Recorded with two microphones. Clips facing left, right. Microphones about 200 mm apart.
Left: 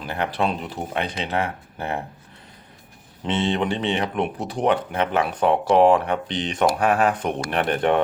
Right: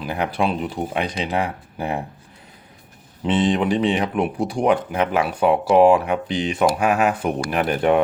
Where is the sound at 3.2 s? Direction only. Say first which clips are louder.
Right 4 dB; 30° left (ahead or behind).